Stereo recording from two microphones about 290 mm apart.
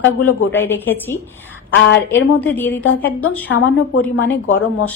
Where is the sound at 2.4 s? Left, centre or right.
Centre.